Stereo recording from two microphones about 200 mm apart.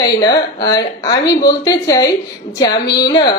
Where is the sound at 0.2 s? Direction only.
20° left (ahead or behind).